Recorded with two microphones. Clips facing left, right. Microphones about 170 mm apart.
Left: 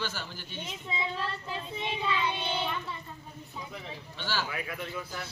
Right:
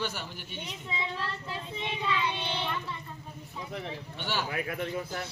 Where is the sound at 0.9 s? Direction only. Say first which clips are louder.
Left 1 dB; 15° left (ahead or behind).